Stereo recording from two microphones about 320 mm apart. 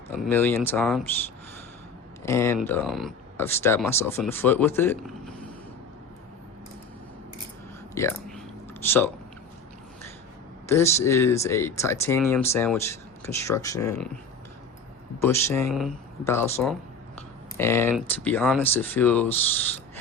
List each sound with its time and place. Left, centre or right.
0.2 s speech: centre
2.2 s speech: centre
7.9 s a sound: centre
10.7 s speech: centre
15.2 s speech: centre